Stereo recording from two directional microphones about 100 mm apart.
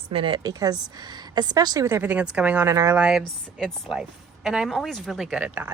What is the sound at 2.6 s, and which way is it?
Speech, 25° right (ahead or behind).